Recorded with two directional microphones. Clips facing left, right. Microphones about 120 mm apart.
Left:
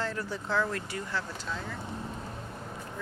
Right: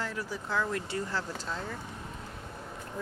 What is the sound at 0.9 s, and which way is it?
Speech, 35° right (ahead or behind).